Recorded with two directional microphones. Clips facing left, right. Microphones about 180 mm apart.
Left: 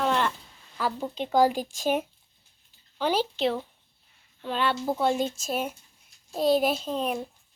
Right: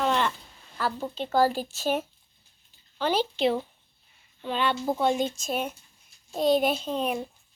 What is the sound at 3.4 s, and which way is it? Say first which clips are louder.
A child's voice: right 2 dB; 5° right (ahead or behind).